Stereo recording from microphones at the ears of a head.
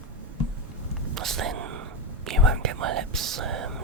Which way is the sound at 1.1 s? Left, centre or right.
Right.